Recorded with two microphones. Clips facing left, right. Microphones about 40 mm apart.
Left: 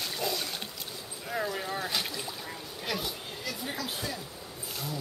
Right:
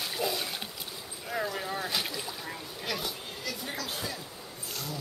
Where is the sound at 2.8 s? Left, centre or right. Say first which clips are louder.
Left 1 dB; centre.